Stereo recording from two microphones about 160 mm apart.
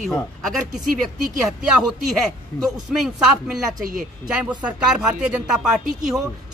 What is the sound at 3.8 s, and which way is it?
Speech, 55° right (ahead or behind).